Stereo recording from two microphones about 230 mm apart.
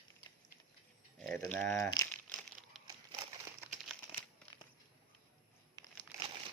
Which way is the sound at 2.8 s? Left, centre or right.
Centre.